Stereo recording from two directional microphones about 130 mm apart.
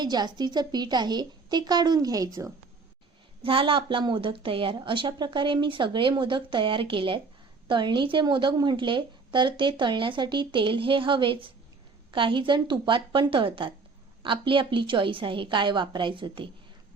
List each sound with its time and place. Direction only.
0.0 s a woman's voice: 35° right (ahead or behind)
3.4 s a woman's voice: 45° right (ahead or behind)